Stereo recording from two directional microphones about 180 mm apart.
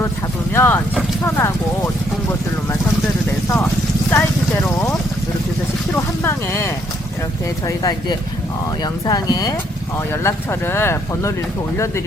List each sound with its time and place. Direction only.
0.5 s speech: 15° left (ahead or behind)
4.1 s clip-clop: 10° left (ahead or behind)
5.9 s vehicle: 15° left (ahead or behind)
7.8 s speech: 25° left (ahead or behind)